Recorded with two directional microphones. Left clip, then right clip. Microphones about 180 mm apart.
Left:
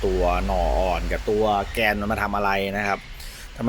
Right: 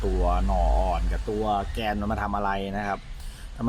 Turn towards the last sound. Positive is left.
turn(degrees=10)  # may be behind; listen again after turning